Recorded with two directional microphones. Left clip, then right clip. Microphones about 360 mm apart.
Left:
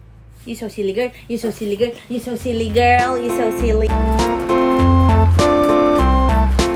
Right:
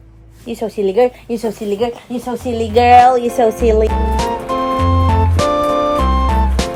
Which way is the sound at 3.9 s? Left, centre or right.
Centre.